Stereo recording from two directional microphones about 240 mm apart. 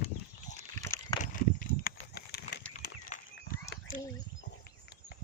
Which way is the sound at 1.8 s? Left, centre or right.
Left.